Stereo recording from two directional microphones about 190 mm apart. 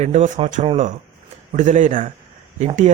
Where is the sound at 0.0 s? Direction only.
35° right (ahead or behind).